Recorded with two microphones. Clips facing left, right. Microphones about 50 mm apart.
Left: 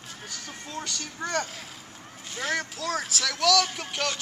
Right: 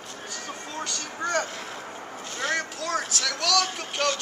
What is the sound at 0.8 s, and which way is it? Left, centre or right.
Speech, centre.